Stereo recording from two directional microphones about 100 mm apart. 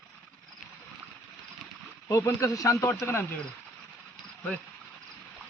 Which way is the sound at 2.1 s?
35° left (ahead or behind).